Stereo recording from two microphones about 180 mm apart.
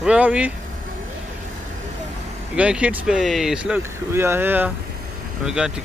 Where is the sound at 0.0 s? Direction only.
5° right (ahead or behind).